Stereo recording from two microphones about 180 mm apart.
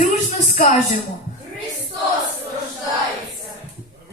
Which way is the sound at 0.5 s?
50° left (ahead or behind).